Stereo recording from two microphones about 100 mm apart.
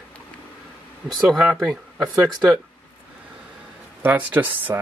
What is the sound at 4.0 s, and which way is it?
Speech, 15° right (ahead or behind).